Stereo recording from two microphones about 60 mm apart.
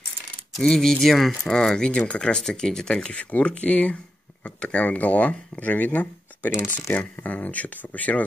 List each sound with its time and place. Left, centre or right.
0.6 s speech: centre; by 8.2 s left